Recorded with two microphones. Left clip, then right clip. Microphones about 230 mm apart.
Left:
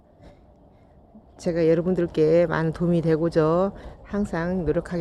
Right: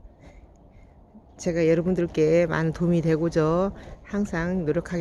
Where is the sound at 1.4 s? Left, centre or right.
Centre.